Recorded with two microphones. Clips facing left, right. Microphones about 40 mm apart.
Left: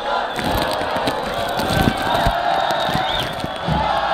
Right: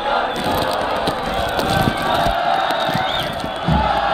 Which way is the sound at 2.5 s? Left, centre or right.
Right.